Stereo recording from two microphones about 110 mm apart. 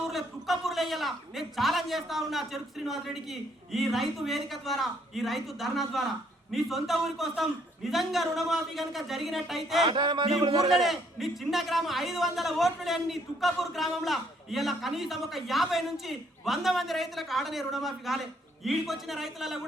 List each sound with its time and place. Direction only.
0.0 s a man's voice: centre (ahead or behind)
9.8 s music: 45° right (ahead or behind)
10.4 s a man's voice: 35° right (ahead or behind)
10.7 s a man's voice: centre (ahead or behind)